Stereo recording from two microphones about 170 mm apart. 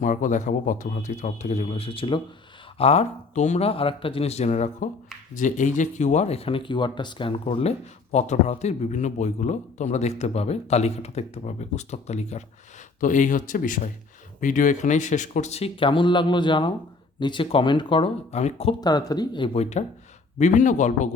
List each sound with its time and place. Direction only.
0.0 s a man's voice: 45° left (ahead or behind)
18.8 s speech: 25° left (ahead or behind)
19.8 s a man's voice: 40° left (ahead or behind)